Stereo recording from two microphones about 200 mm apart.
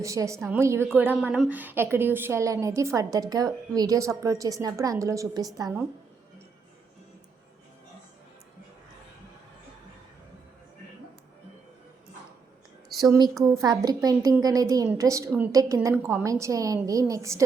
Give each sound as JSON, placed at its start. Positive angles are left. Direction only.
{"t": 0.0, "sound": "a woman's voice", "side_deg": -15}
{"t": 12.9, "sound": "a sound", "side_deg": 0}
{"t": 13.4, "sound": "a woman's voice", "side_deg": -20}